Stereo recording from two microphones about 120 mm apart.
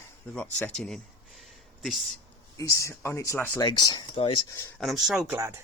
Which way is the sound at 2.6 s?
25° left (ahead or behind).